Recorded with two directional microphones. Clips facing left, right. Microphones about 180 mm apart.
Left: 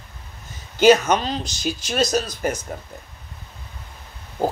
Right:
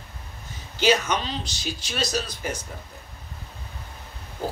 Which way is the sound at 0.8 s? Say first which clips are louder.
Left 7 dB; 45° left (ahead or behind).